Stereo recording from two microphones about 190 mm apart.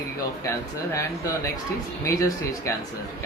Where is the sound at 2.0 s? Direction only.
15° left (ahead or behind).